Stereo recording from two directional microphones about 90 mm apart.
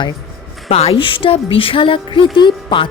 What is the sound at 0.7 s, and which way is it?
Speech, 80° left.